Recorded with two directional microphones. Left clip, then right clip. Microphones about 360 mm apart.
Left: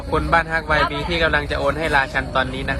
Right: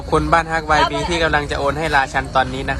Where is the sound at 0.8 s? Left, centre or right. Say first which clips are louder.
Right 4 dB; right.